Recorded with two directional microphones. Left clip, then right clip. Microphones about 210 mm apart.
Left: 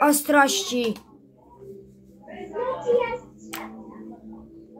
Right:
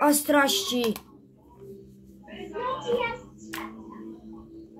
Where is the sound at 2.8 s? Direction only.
30° right (ahead or behind).